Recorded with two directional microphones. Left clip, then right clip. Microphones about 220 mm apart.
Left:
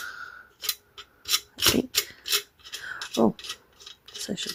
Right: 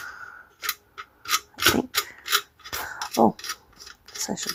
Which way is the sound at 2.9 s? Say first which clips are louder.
Right 4 dB; 15° left (ahead or behind).